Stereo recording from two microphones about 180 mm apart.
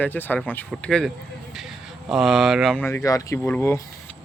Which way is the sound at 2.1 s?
Centre (ahead or behind).